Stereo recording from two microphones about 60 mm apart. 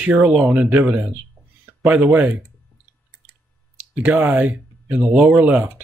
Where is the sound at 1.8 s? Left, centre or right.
Right.